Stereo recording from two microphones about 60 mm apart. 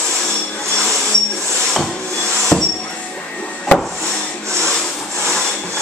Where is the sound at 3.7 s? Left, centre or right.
Centre.